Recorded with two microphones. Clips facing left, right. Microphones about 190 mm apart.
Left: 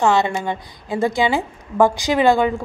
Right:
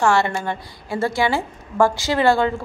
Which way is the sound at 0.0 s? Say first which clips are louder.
Left 1 dB; 20° left (ahead or behind).